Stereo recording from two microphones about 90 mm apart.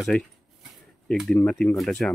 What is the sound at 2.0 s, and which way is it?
Speech, 10° left (ahead or behind).